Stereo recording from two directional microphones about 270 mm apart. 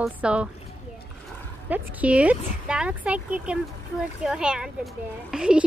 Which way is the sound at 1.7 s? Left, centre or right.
Centre.